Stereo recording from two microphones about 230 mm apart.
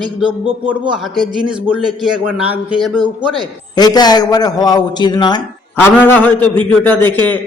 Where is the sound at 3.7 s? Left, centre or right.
Centre.